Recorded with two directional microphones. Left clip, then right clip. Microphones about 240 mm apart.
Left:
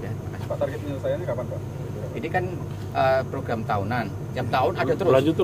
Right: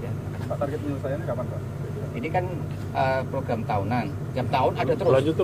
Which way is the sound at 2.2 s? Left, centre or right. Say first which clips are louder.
Even; left.